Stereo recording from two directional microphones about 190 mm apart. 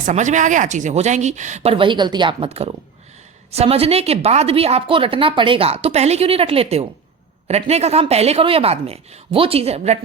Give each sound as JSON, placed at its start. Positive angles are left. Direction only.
{"t": 0.0, "sound": "a woman's voice", "side_deg": -40}